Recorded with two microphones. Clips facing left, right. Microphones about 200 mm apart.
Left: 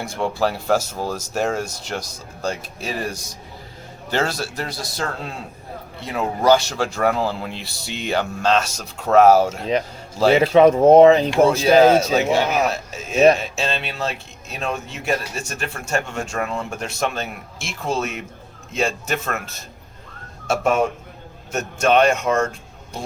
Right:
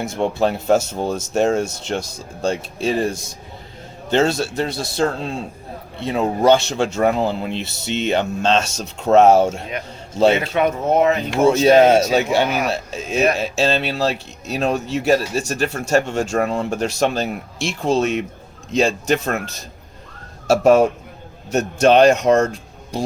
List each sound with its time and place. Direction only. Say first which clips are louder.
0.0 s speech: right 3 dB; 20° right (ahead or behind)
10.4 s speech: left 7 dB; 30° left (ahead or behind)
11.4 s speech: right 3 dB; 25° right (ahead or behind)
20.5 s speech: right 7 dB; 35° right (ahead or behind)